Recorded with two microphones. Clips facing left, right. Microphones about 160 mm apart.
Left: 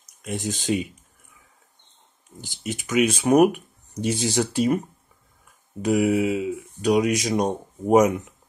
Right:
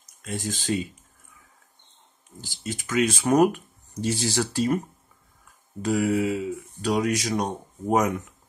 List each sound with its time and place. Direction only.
0.2 s speech: 20° left (ahead or behind)
2.4 s speech: 20° left (ahead or behind)
5.8 s speech: 20° left (ahead or behind)